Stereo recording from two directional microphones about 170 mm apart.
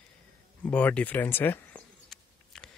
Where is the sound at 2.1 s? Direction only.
5° left (ahead or behind).